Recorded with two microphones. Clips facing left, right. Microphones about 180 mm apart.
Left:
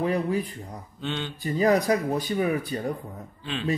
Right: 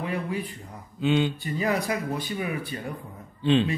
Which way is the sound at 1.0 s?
10° right (ahead or behind).